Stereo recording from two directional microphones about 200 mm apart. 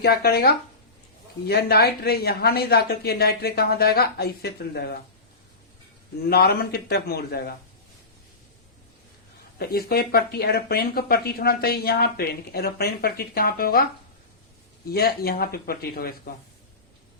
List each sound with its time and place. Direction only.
0.0 s speech: 50° left (ahead or behind)
6.2 s speech: 50° left (ahead or behind)
9.6 s speech: 50° left (ahead or behind)
14.8 s speech: 50° left (ahead or behind)